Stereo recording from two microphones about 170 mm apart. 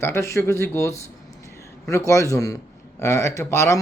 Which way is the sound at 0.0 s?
15° left (ahead or behind).